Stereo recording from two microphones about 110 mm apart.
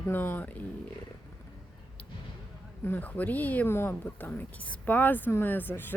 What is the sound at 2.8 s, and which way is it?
Speech, 15° left (ahead or behind).